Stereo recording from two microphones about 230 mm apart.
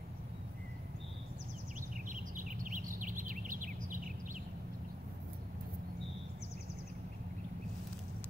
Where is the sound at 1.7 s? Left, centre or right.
Right.